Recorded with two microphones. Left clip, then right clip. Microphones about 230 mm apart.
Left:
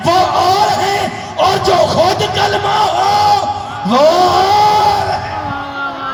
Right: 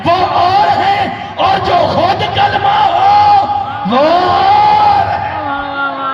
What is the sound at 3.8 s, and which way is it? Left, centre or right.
Music, left.